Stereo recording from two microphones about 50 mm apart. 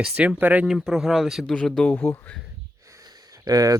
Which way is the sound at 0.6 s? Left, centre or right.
Centre.